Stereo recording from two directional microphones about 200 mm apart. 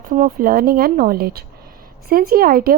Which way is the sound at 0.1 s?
45° right (ahead or behind).